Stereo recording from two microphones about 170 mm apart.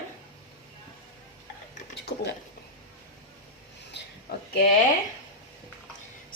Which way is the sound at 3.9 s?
90° left.